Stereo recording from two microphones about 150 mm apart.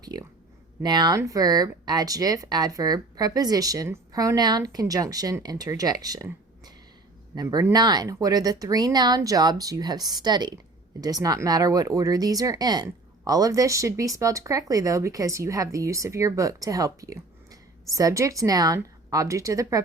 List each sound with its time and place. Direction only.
0.0 s speech: 25° right (ahead or behind)